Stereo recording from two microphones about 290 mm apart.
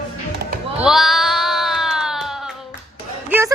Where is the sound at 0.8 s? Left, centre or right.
Centre.